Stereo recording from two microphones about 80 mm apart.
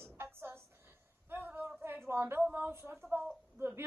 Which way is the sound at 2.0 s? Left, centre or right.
Right.